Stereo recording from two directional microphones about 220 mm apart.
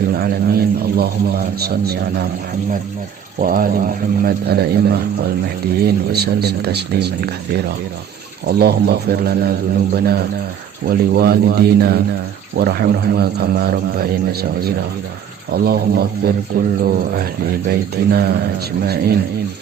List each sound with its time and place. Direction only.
0.2 s a man's voice: 45° right (ahead or behind)
3.4 s a man's voice: 40° right (ahead or behind)
8.4 s a man's voice: 45° right (ahead or behind)
15.5 s a man's voice: 45° right (ahead or behind)